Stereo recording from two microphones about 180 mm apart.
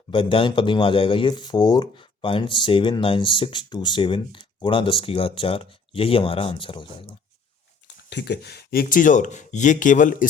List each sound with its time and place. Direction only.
0.1 s speech: 30° left (ahead or behind)
8.1 s speech: 65° left (ahead or behind); by 10.2 s 45° left (ahead or behind)